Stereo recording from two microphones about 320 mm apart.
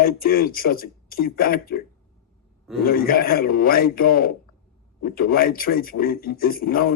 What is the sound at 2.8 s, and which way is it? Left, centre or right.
Speech, left.